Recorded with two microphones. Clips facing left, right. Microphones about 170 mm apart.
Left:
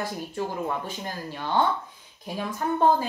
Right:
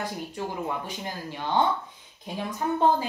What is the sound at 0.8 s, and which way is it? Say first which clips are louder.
Speech: left 1 dB; 15° right (ahead or behind).